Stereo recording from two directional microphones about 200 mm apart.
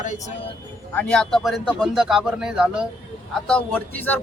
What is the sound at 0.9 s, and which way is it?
Speech, 5° left (ahead or behind).